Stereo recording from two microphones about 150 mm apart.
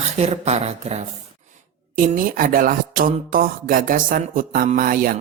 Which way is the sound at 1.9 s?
65° right (ahead or behind).